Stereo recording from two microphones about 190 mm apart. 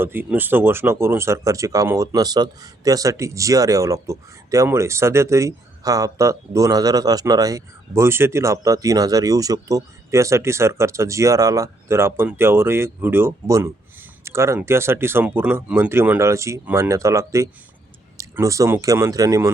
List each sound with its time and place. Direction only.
0.0 s speech: 10° right (ahead or behind)